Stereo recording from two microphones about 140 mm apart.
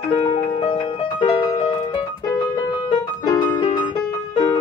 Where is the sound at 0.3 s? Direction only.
40° left (ahead or behind).